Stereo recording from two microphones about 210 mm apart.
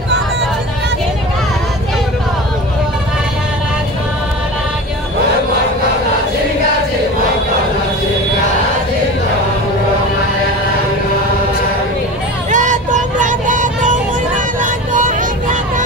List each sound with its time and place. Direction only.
12.4 s vehicle: 35° right (ahead or behind)